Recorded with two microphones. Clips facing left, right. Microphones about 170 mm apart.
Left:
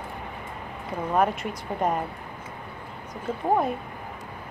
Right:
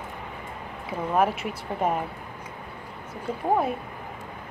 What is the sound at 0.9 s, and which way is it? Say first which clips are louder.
Speech: even; 5° right (ahead or behind).